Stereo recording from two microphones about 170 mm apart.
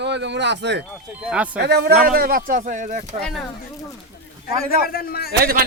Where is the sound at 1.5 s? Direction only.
70° right (ahead or behind); by 3.2 s 50° right (ahead or behind).